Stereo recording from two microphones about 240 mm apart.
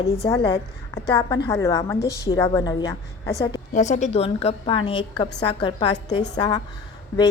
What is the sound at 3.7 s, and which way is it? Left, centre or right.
A woman's voice, left.